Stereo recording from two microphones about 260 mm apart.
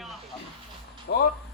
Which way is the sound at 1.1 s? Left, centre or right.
Left.